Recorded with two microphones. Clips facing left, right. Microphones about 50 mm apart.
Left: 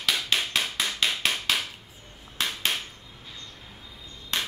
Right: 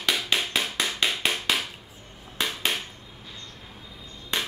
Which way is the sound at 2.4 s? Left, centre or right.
Centre.